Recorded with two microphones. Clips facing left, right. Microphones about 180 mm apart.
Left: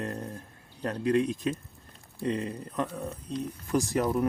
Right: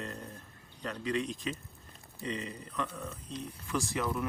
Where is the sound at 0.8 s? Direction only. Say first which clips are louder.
Left 8 dB; 50° left (ahead or behind).